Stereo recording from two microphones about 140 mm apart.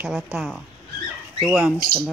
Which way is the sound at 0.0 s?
5° right (ahead or behind).